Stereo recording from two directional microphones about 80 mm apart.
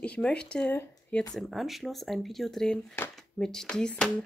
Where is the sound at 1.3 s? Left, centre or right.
Centre.